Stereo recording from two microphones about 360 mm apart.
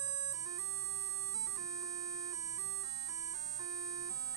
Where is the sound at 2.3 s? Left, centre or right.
Centre.